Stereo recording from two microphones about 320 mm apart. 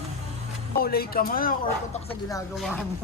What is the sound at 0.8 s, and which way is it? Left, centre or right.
Speech, left.